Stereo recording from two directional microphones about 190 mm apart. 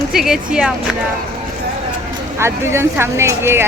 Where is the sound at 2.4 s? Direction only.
15° right (ahead or behind).